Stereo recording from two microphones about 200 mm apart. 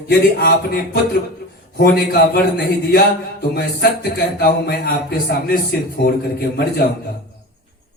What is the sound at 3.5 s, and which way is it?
Speech, 55° left (ahead or behind).